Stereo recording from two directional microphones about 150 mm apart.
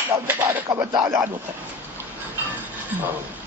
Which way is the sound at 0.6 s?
30° right (ahead or behind).